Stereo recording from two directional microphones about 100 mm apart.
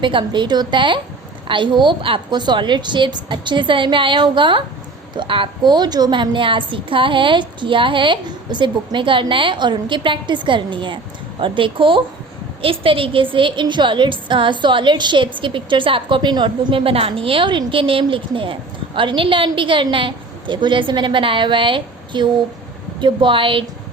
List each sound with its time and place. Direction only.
0.0 s a woman's voice: 55° right (ahead or behind)